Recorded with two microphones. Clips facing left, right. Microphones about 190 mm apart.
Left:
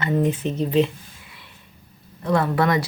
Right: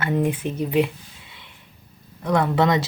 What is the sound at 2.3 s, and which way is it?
Speech, 20° right (ahead or behind).